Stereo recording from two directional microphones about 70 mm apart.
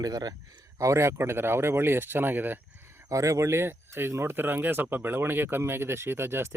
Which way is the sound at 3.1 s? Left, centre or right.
Right.